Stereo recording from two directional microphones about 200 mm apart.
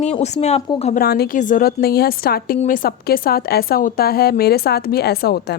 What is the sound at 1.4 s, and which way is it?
A woman's voice, 40° left (ahead or behind).